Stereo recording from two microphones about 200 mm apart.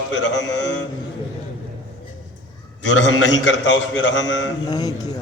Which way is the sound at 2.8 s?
70° left (ahead or behind).